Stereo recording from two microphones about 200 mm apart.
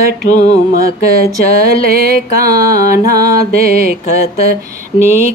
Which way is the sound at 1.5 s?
50° right (ahead or behind).